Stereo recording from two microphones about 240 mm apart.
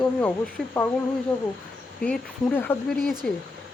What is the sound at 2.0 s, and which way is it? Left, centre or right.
Speech, centre.